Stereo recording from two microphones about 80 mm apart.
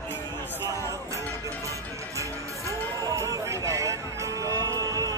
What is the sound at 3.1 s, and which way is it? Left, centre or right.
Music, right.